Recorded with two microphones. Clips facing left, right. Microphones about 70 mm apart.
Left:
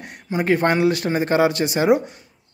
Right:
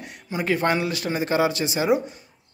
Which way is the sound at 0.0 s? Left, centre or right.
Left.